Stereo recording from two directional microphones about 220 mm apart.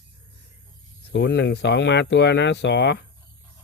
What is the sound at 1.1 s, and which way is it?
Speech, 50° left (ahead or behind).